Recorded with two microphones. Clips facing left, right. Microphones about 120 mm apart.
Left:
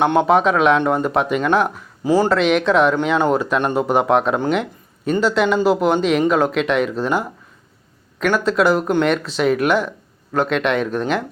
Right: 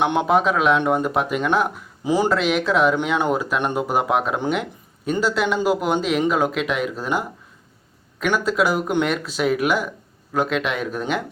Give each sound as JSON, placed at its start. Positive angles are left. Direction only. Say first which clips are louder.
{"t": 0.0, "sound": "speech", "louder": "left 4 dB", "side_deg": -5}
{"t": 2.0, "sound": "speech", "louder": "left 3 dB", "side_deg": -15}
{"t": 2.4, "sound": "speech", "louder": "left 4 dB", "side_deg": -5}
{"t": 8.2, "sound": "speech", "louder": "left 3 dB", "side_deg": -5}